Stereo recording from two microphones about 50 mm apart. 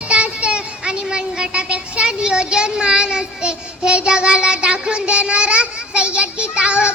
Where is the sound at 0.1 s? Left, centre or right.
Right.